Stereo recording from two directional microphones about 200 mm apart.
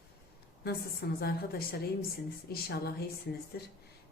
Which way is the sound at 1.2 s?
50° left (ahead or behind).